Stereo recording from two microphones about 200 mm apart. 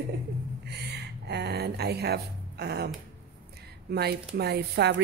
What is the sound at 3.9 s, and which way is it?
A woman's voice, 55° right (ahead or behind).